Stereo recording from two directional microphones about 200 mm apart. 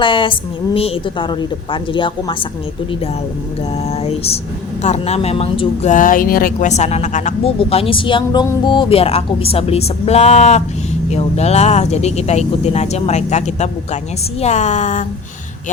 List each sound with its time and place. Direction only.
0.0 s a woman's voice: 25° left (ahead or behind)
3.8 s speech: 30° left (ahead or behind)